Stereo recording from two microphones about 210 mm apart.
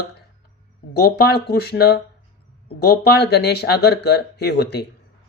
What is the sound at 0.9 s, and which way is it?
Speech, 50° left (ahead or behind).